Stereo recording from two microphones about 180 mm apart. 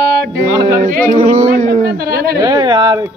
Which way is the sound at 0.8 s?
50° right (ahead or behind).